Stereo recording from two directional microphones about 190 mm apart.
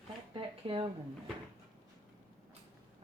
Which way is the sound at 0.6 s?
30° right (ahead or behind).